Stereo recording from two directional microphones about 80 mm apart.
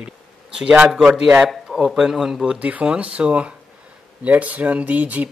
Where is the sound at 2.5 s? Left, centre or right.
Centre.